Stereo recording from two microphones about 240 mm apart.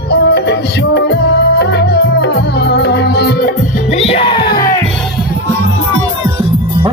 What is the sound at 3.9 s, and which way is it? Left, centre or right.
Music, left.